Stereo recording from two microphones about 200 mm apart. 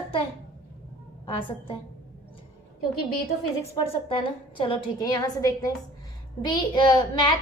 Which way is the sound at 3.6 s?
25° left (ahead or behind).